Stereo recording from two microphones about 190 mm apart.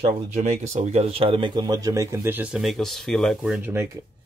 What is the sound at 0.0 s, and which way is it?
Speech, 40° right (ahead or behind).